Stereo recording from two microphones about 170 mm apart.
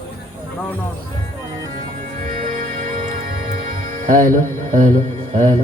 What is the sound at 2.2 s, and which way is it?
Music, 50° right (ahead or behind).